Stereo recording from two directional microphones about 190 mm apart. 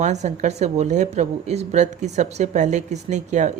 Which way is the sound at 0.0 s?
35° right (ahead or behind).